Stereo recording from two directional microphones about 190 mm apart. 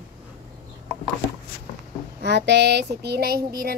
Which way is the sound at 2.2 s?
65° right (ahead or behind).